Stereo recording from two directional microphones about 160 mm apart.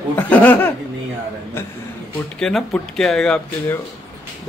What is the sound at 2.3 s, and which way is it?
Speech, 5° left (ahead or behind).